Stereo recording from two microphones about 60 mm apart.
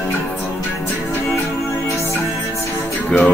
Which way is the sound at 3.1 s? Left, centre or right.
Centre.